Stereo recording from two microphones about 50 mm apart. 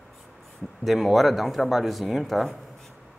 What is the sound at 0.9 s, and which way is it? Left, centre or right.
Speech, centre.